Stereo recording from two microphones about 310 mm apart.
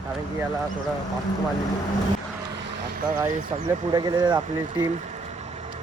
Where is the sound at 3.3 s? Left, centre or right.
Centre.